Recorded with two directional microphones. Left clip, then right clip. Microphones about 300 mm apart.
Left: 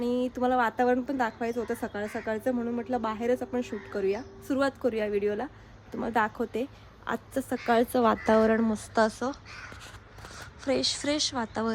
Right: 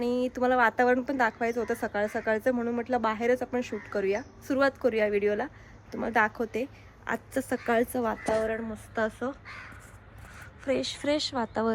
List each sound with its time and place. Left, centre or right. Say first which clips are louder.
0.2 s speech: right 3 dB; centre
8.0 s a woman's voice: left 5 dB; left
9.0 s a woman's voice: left 4 dB; centre
10.7 s speech: even; centre